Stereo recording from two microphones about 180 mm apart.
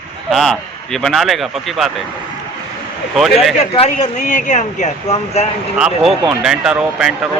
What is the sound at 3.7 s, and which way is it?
Speech, 40° left (ahead or behind).